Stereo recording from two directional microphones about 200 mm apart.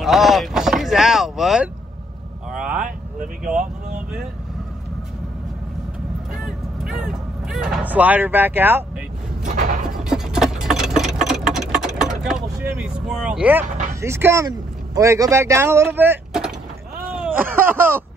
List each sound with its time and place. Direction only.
0.0 s vehicle: centre (ahead or behind)
6.3 s vehicle: centre (ahead or behind)
9.4 s a sound: 40° right (ahead or behind)
10.0 s engine: centre (ahead or behind)
11.7 s vehicle: centre (ahead or behind)
13.7 s speech: 40° right (ahead or behind)
14.0 s speech: 15° right (ahead or behind)
17.1 s a sound: 5° right (ahead or behind)
17.6 s speech: 10° right (ahead or behind)